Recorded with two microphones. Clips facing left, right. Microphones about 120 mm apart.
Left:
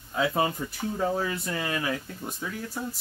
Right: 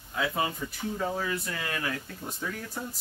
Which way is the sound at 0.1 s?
30° left (ahead or behind).